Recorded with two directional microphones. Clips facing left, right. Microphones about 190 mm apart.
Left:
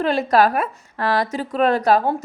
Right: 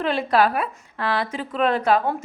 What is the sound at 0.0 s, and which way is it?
A woman's voice, 40° left (ahead or behind).